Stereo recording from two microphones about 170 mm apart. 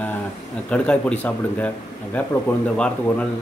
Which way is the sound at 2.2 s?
10° left (ahead or behind).